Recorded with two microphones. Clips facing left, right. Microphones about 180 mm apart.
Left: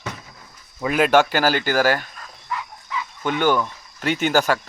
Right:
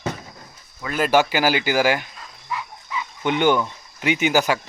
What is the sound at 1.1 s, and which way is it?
Speech, 10° right (ahead or behind).